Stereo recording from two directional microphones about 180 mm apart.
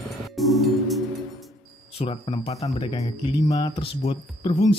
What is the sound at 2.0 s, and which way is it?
Speech, 30° left (ahead or behind).